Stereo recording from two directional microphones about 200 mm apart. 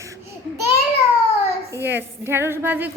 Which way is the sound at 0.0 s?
15° right (ahead or behind).